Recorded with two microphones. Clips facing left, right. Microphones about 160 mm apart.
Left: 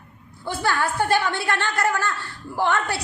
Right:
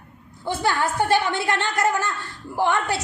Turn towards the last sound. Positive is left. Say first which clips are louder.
# right 1 dB
turn(degrees=-20)  # may be behind; listen again after turning